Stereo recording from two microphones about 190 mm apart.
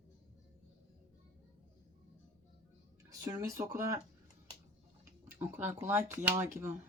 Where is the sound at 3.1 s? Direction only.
20° right (ahead or behind).